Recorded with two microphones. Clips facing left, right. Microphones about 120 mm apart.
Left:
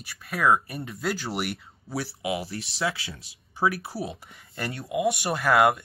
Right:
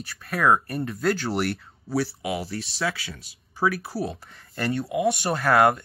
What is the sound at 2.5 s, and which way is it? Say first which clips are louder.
Speech: right 1 dB; 20° left (ahead or behind).